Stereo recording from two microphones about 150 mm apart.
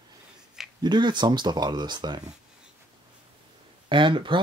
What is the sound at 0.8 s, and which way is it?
Speech, 30° right (ahead or behind).